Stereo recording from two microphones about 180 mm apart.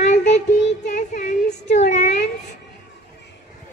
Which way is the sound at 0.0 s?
40° left (ahead or behind).